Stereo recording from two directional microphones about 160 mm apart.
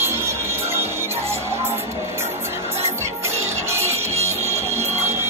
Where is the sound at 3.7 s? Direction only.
15° right (ahead or behind).